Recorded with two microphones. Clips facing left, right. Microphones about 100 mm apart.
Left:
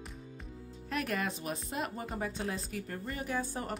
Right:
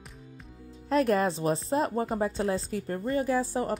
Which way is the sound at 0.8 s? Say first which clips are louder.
Right 10 dB; 35° right (ahead or behind).